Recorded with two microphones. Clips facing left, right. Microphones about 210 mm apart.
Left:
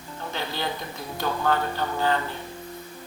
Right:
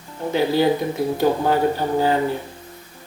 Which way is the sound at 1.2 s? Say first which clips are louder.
Right 7 dB; 30° right (ahead or behind).